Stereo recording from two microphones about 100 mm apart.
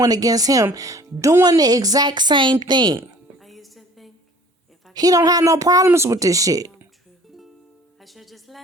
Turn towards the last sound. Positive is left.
turn(degrees=-35)  # may be behind; listen again after turning